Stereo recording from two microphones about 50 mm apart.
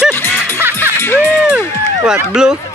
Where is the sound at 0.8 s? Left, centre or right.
Left.